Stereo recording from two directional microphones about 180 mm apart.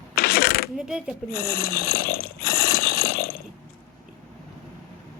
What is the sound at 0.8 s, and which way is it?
Speech, 5° right (ahead or behind).